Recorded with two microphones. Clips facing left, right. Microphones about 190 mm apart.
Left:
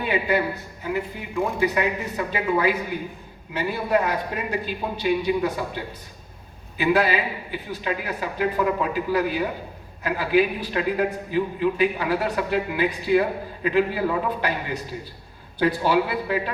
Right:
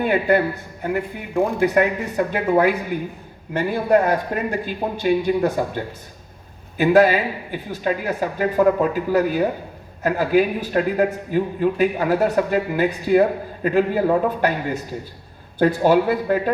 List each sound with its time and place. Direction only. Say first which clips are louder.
0.0 s a man's voice: right 5 dB; 50° right (ahead or behind)